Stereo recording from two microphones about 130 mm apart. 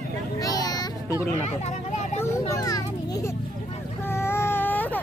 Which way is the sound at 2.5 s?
30° left (ahead or behind).